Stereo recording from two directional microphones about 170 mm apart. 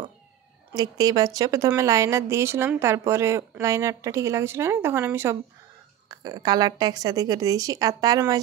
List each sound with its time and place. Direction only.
0.7 s a woman's voice: 20° right (ahead or behind)